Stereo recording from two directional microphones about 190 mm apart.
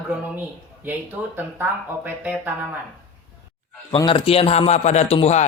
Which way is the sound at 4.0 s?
25° left (ahead or behind).